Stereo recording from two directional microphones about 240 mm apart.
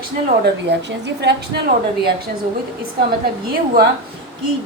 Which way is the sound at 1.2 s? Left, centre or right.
Right.